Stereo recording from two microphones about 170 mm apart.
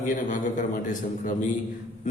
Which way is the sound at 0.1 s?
50° left (ahead or behind).